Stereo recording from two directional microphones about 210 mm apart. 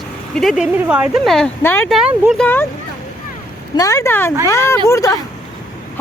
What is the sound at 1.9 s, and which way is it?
Speech, 5° right (ahead or behind).